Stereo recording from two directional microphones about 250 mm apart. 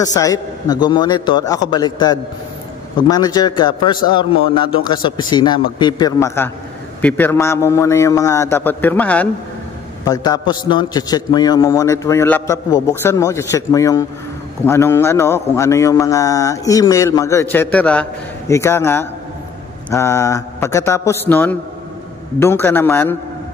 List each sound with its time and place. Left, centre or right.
0.0 s a man's voice: centre